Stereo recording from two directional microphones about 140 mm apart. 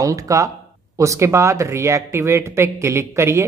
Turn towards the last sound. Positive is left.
turn(degrees=-20)  # may be behind; listen again after turning